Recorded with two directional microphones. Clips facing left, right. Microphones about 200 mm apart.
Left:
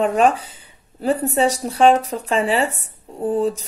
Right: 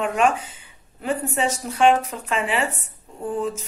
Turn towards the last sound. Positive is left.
turn(degrees=35)  # may be behind; listen again after turning